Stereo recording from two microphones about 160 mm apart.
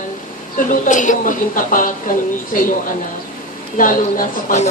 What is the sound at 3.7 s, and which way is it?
Speech, 55° left (ahead or behind).